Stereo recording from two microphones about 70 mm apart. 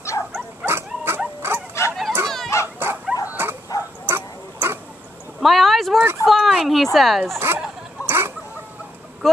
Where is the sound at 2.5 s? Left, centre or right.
Left.